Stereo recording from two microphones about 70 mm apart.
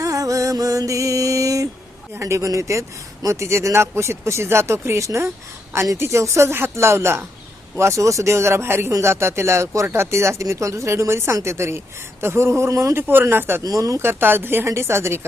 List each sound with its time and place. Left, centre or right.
0.0 s music: right
2.1 s speech: right
13.7 s speech: right
14.0 s speech: right